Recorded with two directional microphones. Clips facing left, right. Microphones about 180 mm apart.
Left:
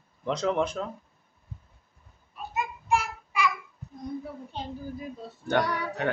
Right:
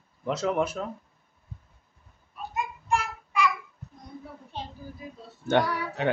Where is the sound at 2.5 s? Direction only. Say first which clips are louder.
Left 1 dB; 5° left (ahead or behind).